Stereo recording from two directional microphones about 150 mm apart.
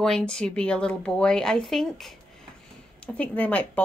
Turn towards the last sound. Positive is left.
turn(degrees=10)  # may be behind; listen again after turning